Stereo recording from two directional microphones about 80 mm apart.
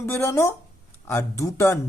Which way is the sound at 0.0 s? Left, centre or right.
Left.